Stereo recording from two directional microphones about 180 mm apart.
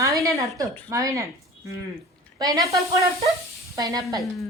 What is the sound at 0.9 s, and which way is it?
Speech, 15° right (ahead or behind).